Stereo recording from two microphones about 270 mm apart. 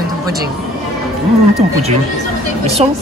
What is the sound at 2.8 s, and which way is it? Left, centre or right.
Speech, right.